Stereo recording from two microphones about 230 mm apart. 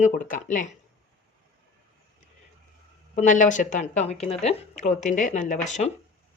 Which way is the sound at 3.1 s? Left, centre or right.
Left.